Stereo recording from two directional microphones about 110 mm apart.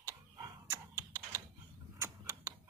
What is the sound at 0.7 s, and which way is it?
Computer keyboard, 25° right (ahead or behind).